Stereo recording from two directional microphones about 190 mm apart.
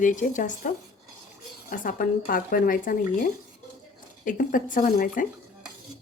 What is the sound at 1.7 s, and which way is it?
Speech, 45° left (ahead or behind).